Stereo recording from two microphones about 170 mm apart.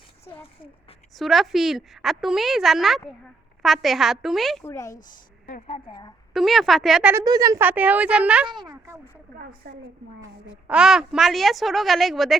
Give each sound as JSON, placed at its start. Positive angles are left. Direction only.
{"t": 1.1, "sound": "a woman's voice", "side_deg": 0}
{"t": 4.6, "sound": "speech", "side_deg": 15}
{"t": 5.6, "sound": "a woman's voice", "side_deg": 30}
{"t": 6.3, "sound": "a woman's voice", "side_deg": 0}
{"t": 7.1, "sound": "a woman's voice", "side_deg": -20}
{"t": 8.4, "sound": "speech", "side_deg": -25}
{"t": 9.4, "sound": "a woman's voice", "side_deg": -65}
{"t": 10.7, "sound": "a woman's voice", "side_deg": -5}